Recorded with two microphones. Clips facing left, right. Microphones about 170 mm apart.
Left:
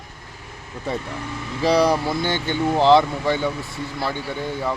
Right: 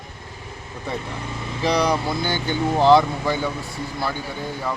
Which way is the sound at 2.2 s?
25° left (ahead or behind).